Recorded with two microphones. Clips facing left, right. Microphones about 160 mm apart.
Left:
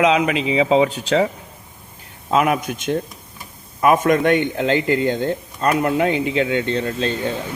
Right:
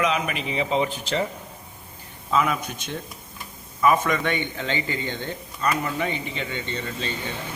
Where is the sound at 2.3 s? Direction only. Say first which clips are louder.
Left 5 dB; 65° left (ahead or behind).